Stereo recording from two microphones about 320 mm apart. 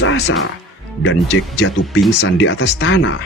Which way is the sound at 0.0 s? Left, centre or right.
Left.